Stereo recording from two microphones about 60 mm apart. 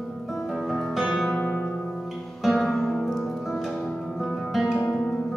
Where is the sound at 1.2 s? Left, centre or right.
Left.